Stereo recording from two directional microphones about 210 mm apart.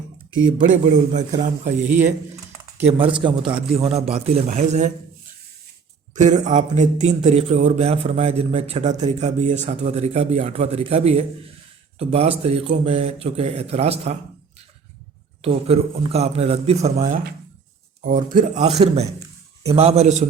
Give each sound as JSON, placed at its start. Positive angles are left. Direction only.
{"t": 0.6, "sound": "a man's voice", "side_deg": -35}
{"t": 6.1, "sound": "a man's voice", "side_deg": -35}
{"t": 15.4, "sound": "a man's voice", "side_deg": -30}
{"t": 19.6, "sound": "a man's voice", "side_deg": -30}